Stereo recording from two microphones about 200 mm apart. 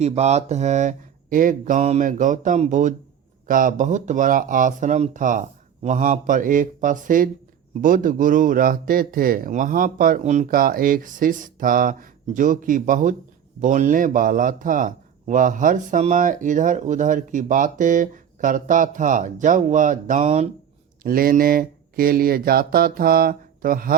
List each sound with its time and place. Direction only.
0.0 s a man's voice: 35° right (ahead or behind)
21.0 s speech: 45° right (ahead or behind)